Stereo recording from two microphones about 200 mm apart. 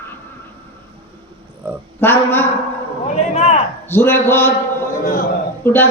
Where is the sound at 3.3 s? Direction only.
30° left (ahead or behind).